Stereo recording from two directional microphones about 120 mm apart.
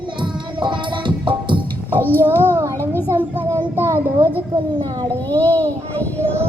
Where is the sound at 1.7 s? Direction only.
15° left (ahead or behind).